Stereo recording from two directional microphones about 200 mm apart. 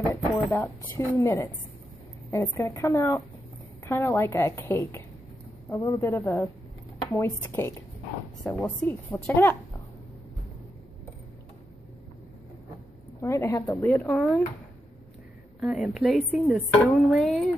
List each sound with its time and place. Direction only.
0.1 s a woman's voice: 15° left (ahead or behind)
13.2 s a woman's voice: 15° left (ahead or behind)
14.1 s speech: centre (ahead or behind)
15.6 s speech: centre (ahead or behind)